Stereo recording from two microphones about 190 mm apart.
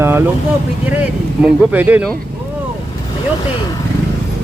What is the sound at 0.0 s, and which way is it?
Vehicle, 15° right (ahead or behind).